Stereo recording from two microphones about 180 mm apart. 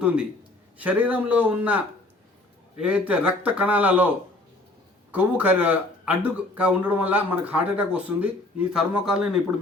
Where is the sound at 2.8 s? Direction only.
5° right (ahead or behind).